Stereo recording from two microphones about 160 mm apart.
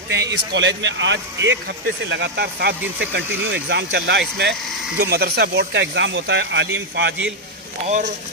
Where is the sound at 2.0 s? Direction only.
90° right.